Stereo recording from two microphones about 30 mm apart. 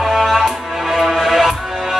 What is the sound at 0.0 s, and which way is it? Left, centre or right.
Music, centre.